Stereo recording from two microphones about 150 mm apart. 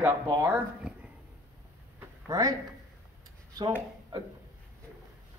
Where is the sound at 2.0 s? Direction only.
25° right (ahead or behind).